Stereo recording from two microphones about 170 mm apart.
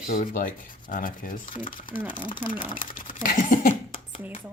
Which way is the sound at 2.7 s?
55° left (ahead or behind).